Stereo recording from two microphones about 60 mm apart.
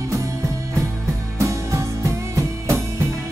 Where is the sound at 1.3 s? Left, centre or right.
Right.